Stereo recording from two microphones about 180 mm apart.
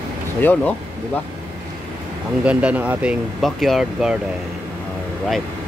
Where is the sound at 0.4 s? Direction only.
10° left (ahead or behind).